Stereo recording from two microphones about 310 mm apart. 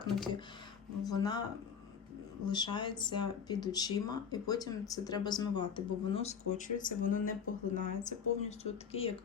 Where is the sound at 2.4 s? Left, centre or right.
Centre.